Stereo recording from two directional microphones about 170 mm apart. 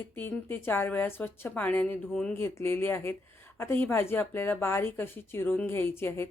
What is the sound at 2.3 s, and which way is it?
Speech, 15° left (ahead or behind).